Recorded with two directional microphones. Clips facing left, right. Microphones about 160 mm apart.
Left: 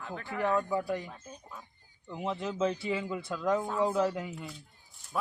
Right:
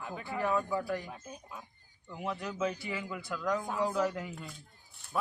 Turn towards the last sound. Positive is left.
turn(degrees=0)  # may be behind; listen again after turning